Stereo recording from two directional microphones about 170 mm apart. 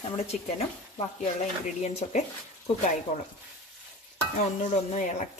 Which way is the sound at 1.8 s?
40° left (ahead or behind).